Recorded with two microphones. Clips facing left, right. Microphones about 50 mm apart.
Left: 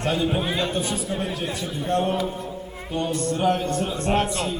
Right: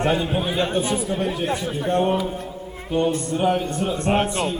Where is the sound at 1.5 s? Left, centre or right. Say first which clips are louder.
Right 3 dB; right.